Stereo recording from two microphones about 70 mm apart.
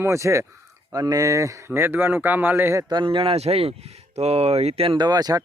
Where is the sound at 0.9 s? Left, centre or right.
Right.